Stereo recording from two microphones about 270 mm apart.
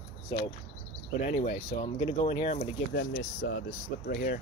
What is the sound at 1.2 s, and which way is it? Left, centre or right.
Speech, left.